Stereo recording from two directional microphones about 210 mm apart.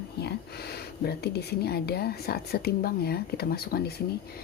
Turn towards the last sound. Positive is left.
turn(degrees=45)  # may be behind; listen again after turning